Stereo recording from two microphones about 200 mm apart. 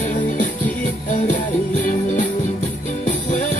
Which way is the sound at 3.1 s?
35° left (ahead or behind).